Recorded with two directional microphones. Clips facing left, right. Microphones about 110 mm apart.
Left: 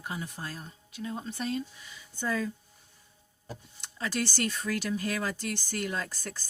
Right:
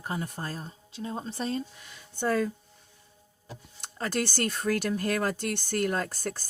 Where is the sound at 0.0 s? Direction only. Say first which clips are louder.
Right 4 dB; 45° right (ahead or behind).